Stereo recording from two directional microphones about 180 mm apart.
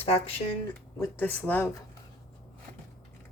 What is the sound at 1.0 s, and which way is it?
Speech, 10° left (ahead or behind).